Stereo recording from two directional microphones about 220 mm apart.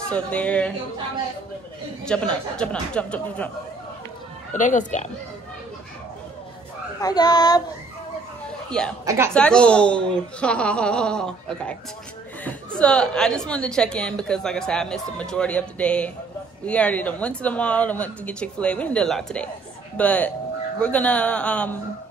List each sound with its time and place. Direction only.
0.1 s a woman's voice: 5° left (ahead or behind)
2.0 s a woman's voice: 5° left (ahead or behind)
4.6 s speech: 35° left (ahead or behind)
7.0 s speech: 15° left (ahead or behind)
8.6 s speech: 5° left (ahead or behind)
9.0 s a woman's voice: 10° right (ahead or behind)
9.3 s a woman's voice: 5° left (ahead or behind)